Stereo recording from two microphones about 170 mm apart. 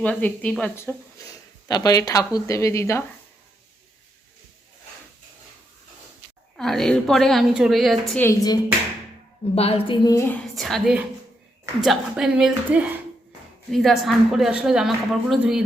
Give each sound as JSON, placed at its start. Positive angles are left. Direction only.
{"t": 0.0, "sound": "speech", "side_deg": 10}
{"t": 1.6, "sound": "speech", "side_deg": 20}
{"t": 6.6, "sound": "speech", "side_deg": 0}
{"t": 8.2, "sound": "speech", "side_deg": 15}
{"t": 9.6, "sound": "speech", "side_deg": 35}
{"t": 10.4, "sound": "speech", "side_deg": 0}